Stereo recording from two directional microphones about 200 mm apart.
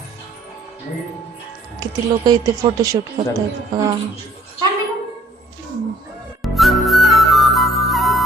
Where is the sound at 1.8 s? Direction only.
20° right (ahead or behind).